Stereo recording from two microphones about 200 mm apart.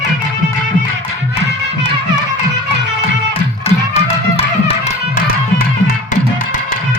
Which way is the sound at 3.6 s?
30° left (ahead or behind).